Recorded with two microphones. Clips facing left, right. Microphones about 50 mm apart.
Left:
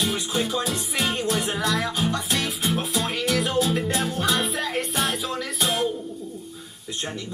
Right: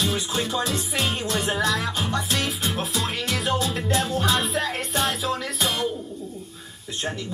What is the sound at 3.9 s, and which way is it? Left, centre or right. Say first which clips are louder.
Music: right 1 dB; right.